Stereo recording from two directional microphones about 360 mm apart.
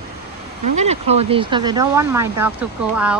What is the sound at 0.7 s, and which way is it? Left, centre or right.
Speech, centre.